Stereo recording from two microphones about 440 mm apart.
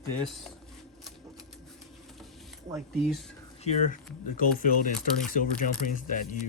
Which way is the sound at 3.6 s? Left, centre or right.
Centre.